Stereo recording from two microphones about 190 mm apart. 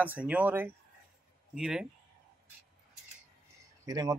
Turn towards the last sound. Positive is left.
turn(degrees=-20)  # may be behind; listen again after turning